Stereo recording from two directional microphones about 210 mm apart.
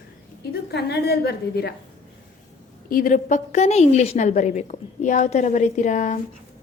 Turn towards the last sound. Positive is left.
turn(degrees=35)  # may be behind; listen again after turning